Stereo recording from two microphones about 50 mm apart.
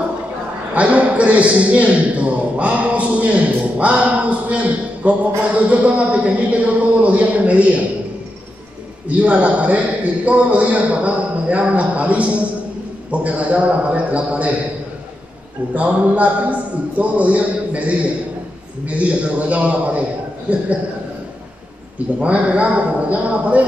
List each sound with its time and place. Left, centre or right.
0.7 s a man's voice: right
9.2 s a man's voice: right
15.7 s a man's voice: right
22.2 s a man's voice: right